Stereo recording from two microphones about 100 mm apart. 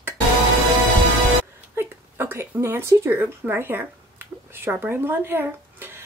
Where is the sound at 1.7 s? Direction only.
20° right (ahead or behind).